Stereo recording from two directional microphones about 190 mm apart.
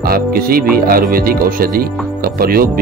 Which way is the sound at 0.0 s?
50° right (ahead or behind).